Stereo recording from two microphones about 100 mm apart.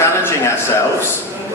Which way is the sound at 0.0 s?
30° left (ahead or behind).